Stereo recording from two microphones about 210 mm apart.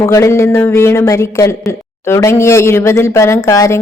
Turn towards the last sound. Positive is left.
turn(degrees=15)  # may be behind; listen again after turning